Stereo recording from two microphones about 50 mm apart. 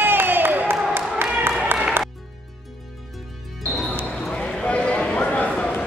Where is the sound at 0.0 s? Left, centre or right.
Right.